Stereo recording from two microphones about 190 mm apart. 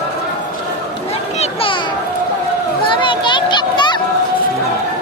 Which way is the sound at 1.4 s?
25° left (ahead or behind).